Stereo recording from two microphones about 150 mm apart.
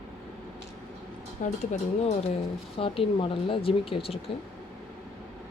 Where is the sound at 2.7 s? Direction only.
35° left (ahead or behind).